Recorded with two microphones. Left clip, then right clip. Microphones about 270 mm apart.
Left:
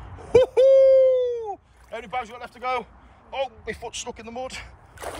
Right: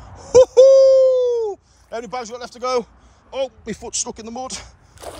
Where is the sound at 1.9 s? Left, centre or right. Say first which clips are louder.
Right 3 dB; centre.